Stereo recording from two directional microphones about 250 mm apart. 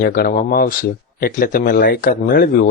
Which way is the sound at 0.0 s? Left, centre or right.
Left.